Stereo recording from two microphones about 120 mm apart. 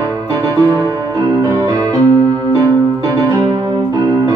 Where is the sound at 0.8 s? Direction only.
25° left (ahead or behind).